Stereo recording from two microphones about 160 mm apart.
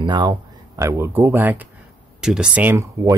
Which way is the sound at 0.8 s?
15° right (ahead or behind).